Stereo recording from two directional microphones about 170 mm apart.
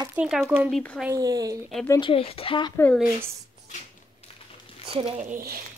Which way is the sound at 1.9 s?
30° left (ahead or behind).